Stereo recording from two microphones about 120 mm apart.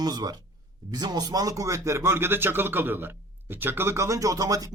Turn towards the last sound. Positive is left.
turn(degrees=-30)  # may be behind; listen again after turning